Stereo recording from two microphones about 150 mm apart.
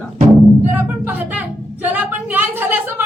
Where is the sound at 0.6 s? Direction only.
15° right (ahead or behind).